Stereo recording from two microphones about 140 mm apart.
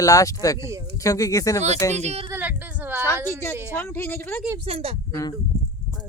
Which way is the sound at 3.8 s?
15° left (ahead or behind).